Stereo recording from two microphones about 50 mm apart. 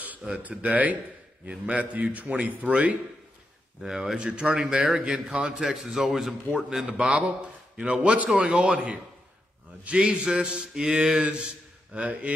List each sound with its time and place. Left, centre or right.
0.4 s a man's voice: right
3.8 s mantra: centre
4.2 s a man's voice: centre
4.6 s mantra: centre
5.3 s a man's voice: right
5.6 s mantra: centre
7.1 s a man's voice: right
8.4 s mantra: centre
10.0 s mantra: right
11.9 s a man's voice: right